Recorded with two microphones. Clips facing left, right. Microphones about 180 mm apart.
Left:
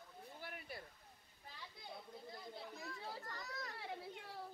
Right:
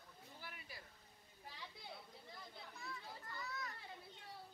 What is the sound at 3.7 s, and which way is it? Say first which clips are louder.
Children playing: left 7 dB; 75° left (ahead or behind).